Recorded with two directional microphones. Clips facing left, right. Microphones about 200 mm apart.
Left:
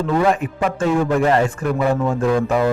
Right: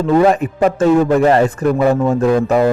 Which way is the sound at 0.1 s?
40° right (ahead or behind).